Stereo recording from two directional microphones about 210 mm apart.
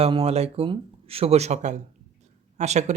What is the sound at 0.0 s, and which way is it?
Speech, 30° right (ahead or behind).